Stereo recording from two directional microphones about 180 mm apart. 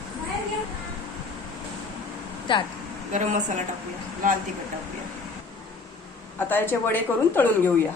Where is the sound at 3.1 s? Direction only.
45° right (ahead or behind).